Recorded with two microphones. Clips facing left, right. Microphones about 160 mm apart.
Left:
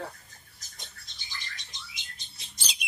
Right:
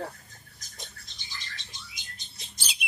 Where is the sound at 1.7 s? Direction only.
25° left (ahead or behind).